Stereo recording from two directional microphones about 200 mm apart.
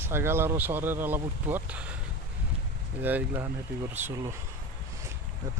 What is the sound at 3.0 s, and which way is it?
Speech, 10° right (ahead or behind).